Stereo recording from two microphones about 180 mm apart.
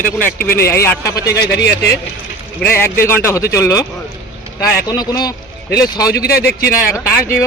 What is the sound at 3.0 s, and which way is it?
Speech, 15° left (ahead or behind).